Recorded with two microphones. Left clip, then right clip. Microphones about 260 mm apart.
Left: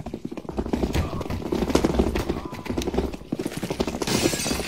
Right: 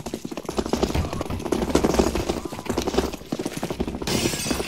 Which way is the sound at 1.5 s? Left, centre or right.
Right.